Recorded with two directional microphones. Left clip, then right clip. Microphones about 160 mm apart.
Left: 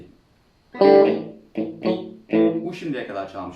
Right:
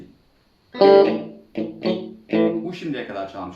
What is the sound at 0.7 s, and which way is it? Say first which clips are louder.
Music: right 1 dB; 25° right (ahead or behind).